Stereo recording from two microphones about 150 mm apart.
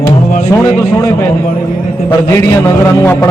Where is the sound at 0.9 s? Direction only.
20° left (ahead or behind).